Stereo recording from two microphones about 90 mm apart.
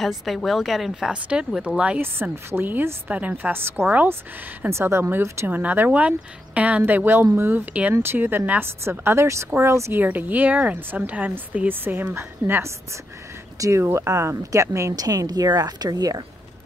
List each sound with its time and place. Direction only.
0.0 s speech: centre (ahead or behind)
2.0 s speech: 25° right (ahead or behind)
5.6 s speech: 20° right (ahead or behind)
10.0 s a woman's voice: 20° right (ahead or behind); by 16.2 s 45° right (ahead or behind)